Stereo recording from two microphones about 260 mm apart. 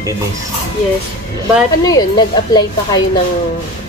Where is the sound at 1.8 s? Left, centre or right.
Centre.